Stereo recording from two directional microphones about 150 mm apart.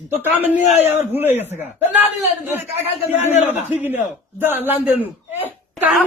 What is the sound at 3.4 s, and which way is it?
Speech, 50° left (ahead or behind).